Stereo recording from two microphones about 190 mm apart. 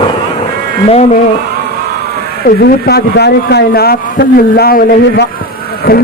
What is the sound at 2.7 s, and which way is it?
Speech, 55° left (ahead or behind).